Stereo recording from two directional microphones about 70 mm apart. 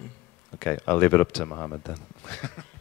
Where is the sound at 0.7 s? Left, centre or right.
Left.